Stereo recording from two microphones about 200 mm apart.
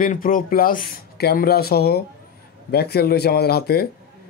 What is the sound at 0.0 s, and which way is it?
Speech, 45° left (ahead or behind).